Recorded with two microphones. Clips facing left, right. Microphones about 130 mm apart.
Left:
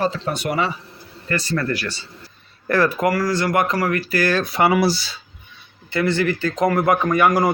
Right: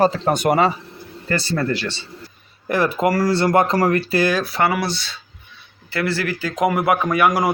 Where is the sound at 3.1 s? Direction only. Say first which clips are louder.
Right 3 dB; 30° right (ahead or behind).